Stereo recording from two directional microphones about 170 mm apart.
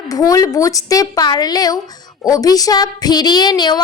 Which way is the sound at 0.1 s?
20° left (ahead or behind).